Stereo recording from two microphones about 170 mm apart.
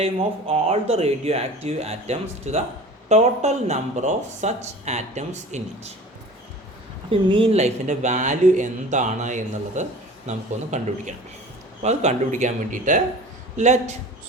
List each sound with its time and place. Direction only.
0.0 s speech: 35° right (ahead or behind)
7.1 s speech: 30° right (ahead or behind)